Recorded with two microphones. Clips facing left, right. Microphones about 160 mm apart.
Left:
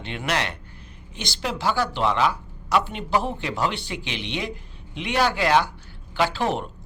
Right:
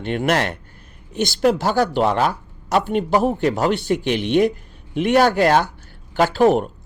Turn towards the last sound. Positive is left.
turn(degrees=-45)  # may be behind; listen again after turning